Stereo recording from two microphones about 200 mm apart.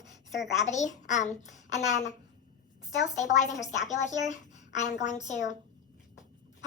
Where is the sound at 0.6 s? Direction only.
35° left (ahead or behind).